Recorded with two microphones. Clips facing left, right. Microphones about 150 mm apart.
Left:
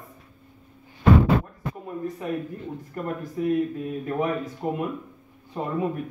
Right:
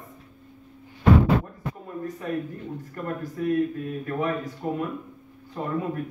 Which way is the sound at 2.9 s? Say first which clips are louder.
Left 2 dB; 15° left (ahead or behind).